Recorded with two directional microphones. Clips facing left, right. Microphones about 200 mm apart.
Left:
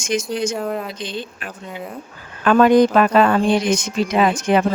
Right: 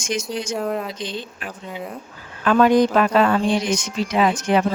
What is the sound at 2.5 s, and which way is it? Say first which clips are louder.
Speech: left 3 dB; 55° left (ahead or behind).